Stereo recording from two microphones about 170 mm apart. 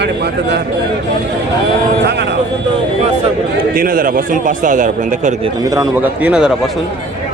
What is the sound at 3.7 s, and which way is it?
A man's voice, 55° right (ahead or behind).